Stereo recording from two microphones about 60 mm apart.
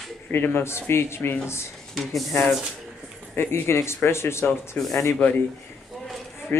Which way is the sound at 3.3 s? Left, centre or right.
Left.